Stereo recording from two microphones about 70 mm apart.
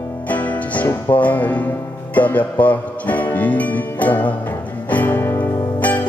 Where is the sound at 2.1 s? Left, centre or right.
Left.